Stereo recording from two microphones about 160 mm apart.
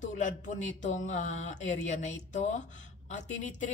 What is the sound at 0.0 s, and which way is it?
A woman's voice, 50° left (ahead or behind).